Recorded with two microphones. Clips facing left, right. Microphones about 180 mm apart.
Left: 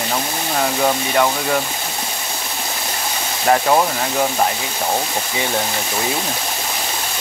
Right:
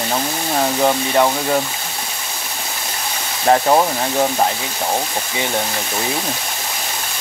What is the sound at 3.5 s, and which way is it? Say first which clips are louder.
Speech: right 1 dB; 20° right (ahead or behind).